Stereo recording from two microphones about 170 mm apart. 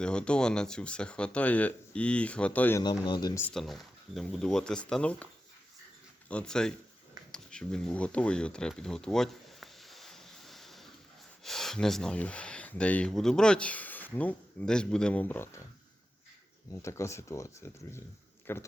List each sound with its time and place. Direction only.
0.0 s speech: 5° left (ahead or behind)
2.8 s speech: 25° left (ahead or behind)
3.4 s speech: centre (ahead or behind)
7.3 s a sound: 5° left (ahead or behind)
11.4 s speech: centre (ahead or behind)
16.7 s speech: 15° left (ahead or behind)